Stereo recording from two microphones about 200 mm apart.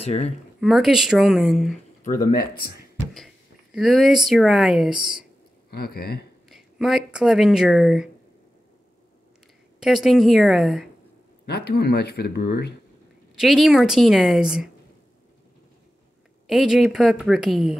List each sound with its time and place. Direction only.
0.0 s speech: 30° left (ahead or behind)
0.6 s a woman's voice: centre (ahead or behind)
2.0 s speech: 45° left (ahead or behind)
3.7 s a woman's voice: centre (ahead or behind)
5.7 s speech: 50° left (ahead or behind)
6.5 s speech: centre (ahead or behind)
9.8 s a woman's voice: centre (ahead or behind)
11.4 s speech: 55° left (ahead or behind)
13.4 s a woman's voice: centre (ahead or behind)
16.4 s a woman's voice: centre (ahead or behind)